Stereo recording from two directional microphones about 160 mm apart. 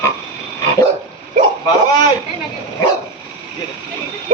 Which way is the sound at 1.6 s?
25° left (ahead or behind).